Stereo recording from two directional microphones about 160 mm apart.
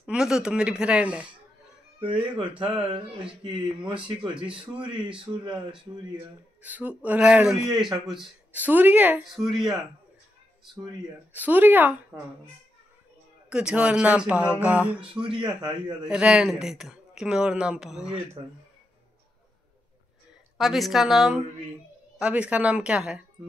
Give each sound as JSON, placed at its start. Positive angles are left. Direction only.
{"t": 0.0, "sound": "speech", "side_deg": -5}
{"t": 2.0, "sound": "speech", "side_deg": -35}
{"t": 5.3, "sound": "speech", "side_deg": -20}
{"t": 6.6, "sound": "speech", "side_deg": -10}
{"t": 11.3, "sound": "speech", "side_deg": -10}
{"t": 13.5, "sound": "speech", "side_deg": -5}
{"t": 15.1, "sound": "speech", "side_deg": -30}
{"t": 16.1, "sound": "speech", "side_deg": -5}
{"t": 20.5, "sound": "speech", "side_deg": 0}